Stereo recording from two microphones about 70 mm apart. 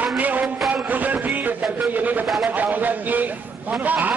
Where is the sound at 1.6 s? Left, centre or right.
Right.